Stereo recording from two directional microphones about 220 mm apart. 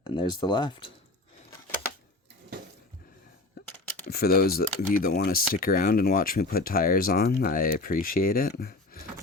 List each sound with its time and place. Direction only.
0.0 s speech: 20° left (ahead or behind)
4.1 s speech: 45° left (ahead or behind)